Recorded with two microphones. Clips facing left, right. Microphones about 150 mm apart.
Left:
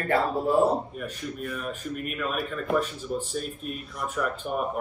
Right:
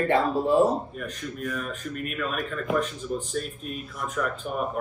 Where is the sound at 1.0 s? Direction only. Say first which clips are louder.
Right 1 dB; 5° left (ahead or behind).